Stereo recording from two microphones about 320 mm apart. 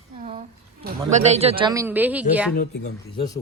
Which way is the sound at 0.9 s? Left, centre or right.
Right.